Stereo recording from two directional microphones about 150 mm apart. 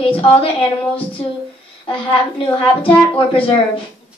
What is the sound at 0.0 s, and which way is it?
A woman's voice, 40° left (ahead or behind).